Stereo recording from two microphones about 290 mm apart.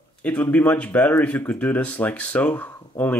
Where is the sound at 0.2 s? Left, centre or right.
Centre.